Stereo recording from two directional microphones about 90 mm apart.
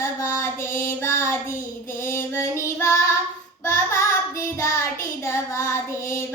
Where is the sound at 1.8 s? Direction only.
30° left (ahead or behind).